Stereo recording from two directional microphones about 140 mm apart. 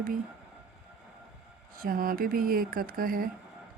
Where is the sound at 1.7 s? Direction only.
90° right.